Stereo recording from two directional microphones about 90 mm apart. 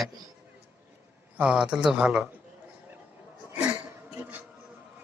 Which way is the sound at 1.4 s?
10° right (ahead or behind).